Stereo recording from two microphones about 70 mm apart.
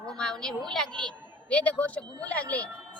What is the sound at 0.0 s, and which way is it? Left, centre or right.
A woman's voice, centre.